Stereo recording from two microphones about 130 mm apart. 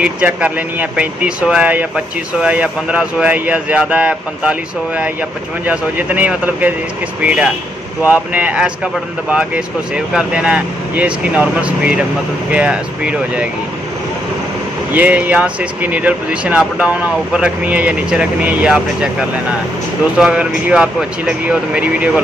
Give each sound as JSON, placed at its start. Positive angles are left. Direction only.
{"t": 0.0, "sound": "speech", "side_deg": -10}
{"t": 15.0, "sound": "speech", "side_deg": -10}
{"t": 20.2, "sound": "speech", "side_deg": -10}